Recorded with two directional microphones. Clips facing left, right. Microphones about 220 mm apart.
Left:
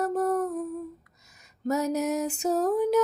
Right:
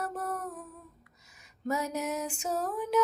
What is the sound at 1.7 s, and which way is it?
Music, 40° left (ahead or behind).